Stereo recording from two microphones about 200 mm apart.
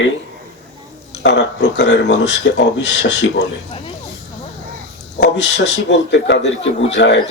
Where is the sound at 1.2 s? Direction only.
60° left (ahead or behind).